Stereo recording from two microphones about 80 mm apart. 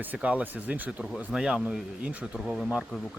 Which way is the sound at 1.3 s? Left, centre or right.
Centre.